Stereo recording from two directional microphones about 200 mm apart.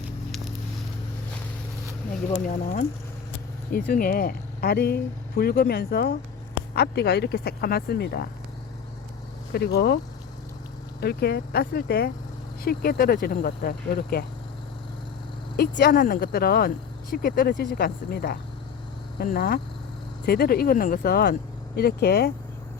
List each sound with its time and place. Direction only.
0.3 s a sound: centre (ahead or behind)
3.7 s speech: 45° left (ahead or behind)
9.5 s speech: 55° left (ahead or behind)
11.0 s speech: 50° left (ahead or behind)
15.5 s speech: 50° left (ahead or behind)